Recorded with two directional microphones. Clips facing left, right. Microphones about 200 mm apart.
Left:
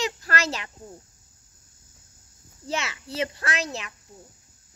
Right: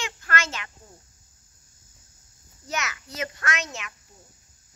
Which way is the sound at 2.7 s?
30° left (ahead or behind).